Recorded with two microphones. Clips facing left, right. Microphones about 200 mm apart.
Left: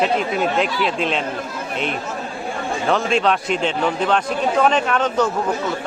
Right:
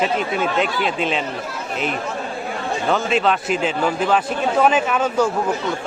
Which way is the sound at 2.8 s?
Centre (ahead or behind).